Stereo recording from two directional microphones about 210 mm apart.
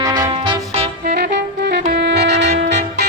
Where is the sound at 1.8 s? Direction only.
45° right (ahead or behind).